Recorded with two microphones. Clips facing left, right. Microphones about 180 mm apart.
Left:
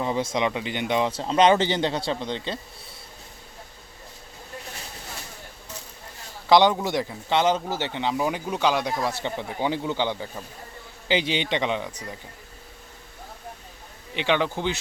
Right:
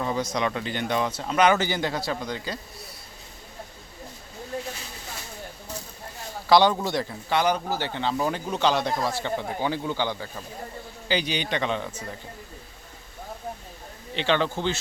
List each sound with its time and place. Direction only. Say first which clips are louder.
0.0 s speech: left 2 dB; 25° left (ahead or behind)
6.5 s speech: left 1 dB; 20° left (ahead or behind)
14.2 s speech: even; 15° left (ahead or behind)